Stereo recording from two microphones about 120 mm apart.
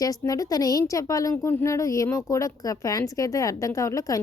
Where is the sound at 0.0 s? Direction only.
30° left (ahead or behind).